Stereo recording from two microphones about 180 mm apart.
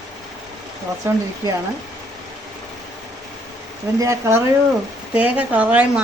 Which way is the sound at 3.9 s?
15° right (ahead or behind).